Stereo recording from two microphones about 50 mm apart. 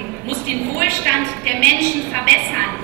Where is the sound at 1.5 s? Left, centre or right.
Left.